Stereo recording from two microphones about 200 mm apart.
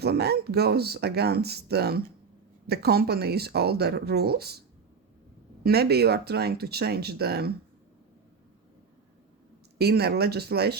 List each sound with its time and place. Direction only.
0.0 s speech: 55° right (ahead or behind)
5.6 s speech: 50° right (ahead or behind)
9.7 s speech: 55° right (ahead or behind)